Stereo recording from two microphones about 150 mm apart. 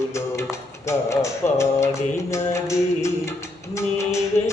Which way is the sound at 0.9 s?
20° left (ahead or behind).